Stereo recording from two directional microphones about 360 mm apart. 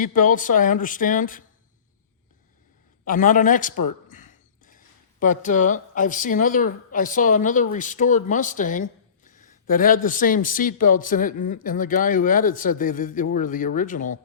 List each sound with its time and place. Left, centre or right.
0.0 s speech: left
3.1 s speech: left
4.1 s a sound: left
5.2 s speech: left